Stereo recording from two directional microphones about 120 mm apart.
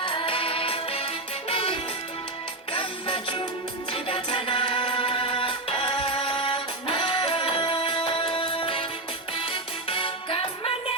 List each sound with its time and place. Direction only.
0.0 s music: 45° left (ahead or behind)